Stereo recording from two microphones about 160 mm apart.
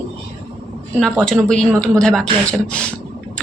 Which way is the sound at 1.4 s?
5° left (ahead or behind).